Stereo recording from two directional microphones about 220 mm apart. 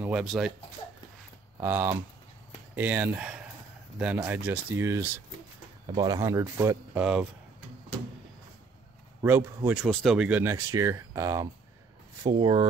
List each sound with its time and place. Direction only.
0.0 s speech: 5° right (ahead or behind)
0.8 s a sound: 15° left (ahead or behind)
1.6 s speech: 10° right (ahead or behind)
9.2 s speech: 10° right (ahead or behind)